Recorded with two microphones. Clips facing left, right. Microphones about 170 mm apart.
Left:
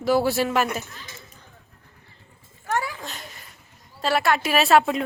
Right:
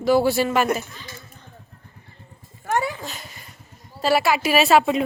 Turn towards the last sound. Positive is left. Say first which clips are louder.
# right 2 dB
turn(degrees=0)  # may be behind; listen again after turning